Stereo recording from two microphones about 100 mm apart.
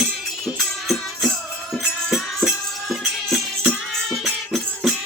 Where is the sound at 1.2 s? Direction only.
Centre (ahead or behind).